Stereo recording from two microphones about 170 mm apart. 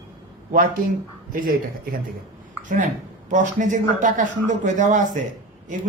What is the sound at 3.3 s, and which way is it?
Speech, 50° right (ahead or behind).